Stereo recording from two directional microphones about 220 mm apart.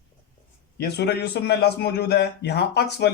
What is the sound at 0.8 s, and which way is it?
Speech, 50° left (ahead or behind).